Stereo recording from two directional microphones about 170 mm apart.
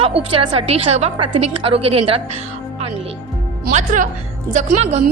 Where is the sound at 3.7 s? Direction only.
50° right (ahead or behind).